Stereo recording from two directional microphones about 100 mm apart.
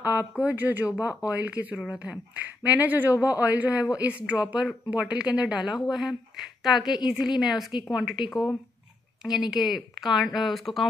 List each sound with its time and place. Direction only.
0.4 s a woman's voice: 20° right (ahead or behind); by 10.9 s centre (ahead or behind)